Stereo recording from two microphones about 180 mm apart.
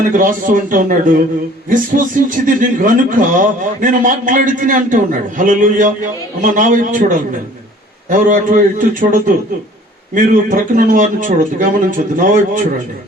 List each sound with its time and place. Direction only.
0.1 s a man's voice: 45° right (ahead or behind)